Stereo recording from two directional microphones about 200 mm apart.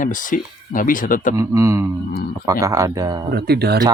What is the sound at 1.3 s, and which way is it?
Speech, 15° right (ahead or behind).